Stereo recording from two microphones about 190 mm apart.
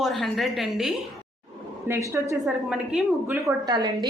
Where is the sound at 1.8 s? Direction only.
10° right (ahead or behind).